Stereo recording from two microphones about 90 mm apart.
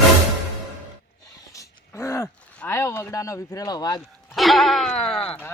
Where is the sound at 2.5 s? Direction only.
25° left (ahead or behind); by 4.0 s 45° left (ahead or behind).